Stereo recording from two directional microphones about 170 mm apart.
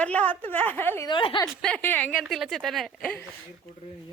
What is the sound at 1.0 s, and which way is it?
Speech, 30° left (ahead or behind).